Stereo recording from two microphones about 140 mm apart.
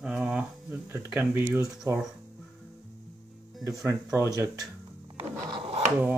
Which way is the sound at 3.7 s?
20° right (ahead or behind).